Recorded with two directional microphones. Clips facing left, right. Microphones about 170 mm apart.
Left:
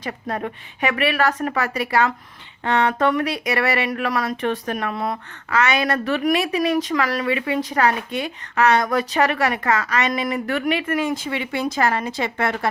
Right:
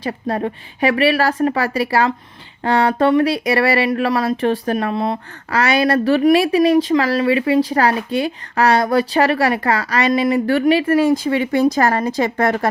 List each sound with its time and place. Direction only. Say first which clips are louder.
0.0 s speech: right 6 dB; 30° right (ahead or behind)